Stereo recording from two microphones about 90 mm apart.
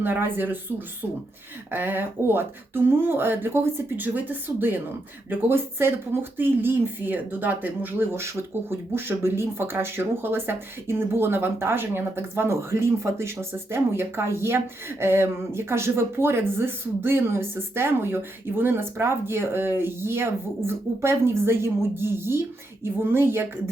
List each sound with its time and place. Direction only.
0.0 s speech: 20° right (ahead or behind)
1.7 s speech: 25° right (ahead or behind)